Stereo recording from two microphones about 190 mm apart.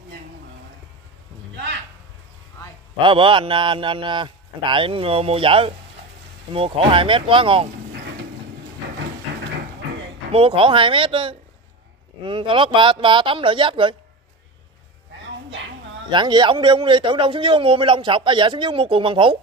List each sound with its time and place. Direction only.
3.0 s speech: 25° right (ahead or behind)
10.3 s speech: 30° right (ahead or behind)
16.1 s speech: 25° right (ahead or behind)